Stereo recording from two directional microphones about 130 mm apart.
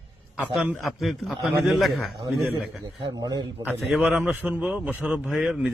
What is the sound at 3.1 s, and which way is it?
Mantra, 30° right (ahead or behind).